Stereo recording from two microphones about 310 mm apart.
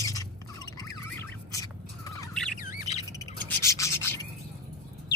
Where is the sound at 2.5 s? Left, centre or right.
Left.